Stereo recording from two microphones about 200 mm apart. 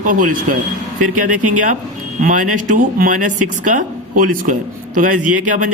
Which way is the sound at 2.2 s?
40° right (ahead or behind).